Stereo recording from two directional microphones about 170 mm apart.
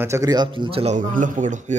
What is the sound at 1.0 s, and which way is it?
Speech, 50° right (ahead or behind).